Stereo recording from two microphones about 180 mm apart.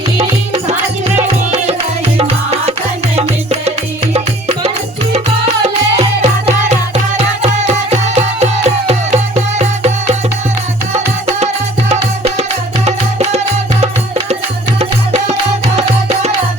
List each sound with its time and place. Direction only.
0.5 s music: 40° right (ahead or behind)
4.1 s music: 35° right (ahead or behind)
11.9 s music: 35° right (ahead or behind)